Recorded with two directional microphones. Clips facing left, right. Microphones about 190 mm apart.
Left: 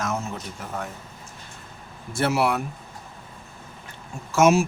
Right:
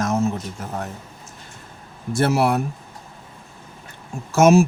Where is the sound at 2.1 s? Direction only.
45° right (ahead or behind).